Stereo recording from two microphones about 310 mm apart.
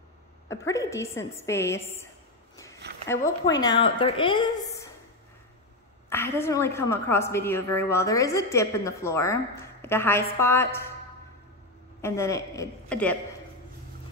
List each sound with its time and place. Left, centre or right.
0.5 s a woman's voice: centre
3.1 s a woman's voice: centre
6.0 s a woman's voice: centre
12.0 s a woman's voice: centre